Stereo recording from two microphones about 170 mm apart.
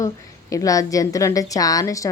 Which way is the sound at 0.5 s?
20° left (ahead or behind).